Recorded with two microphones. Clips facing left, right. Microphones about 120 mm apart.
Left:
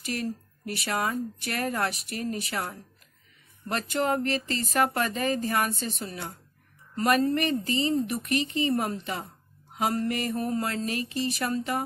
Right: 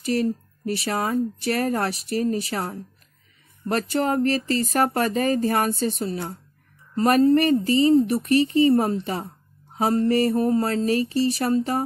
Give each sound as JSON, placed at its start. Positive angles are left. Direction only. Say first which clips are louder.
{"t": 0.0, "sound": "a woman's voice", "louder": "right 9 dB", "side_deg": -30}